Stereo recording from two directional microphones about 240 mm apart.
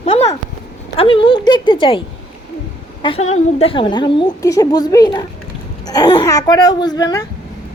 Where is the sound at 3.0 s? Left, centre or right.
Left.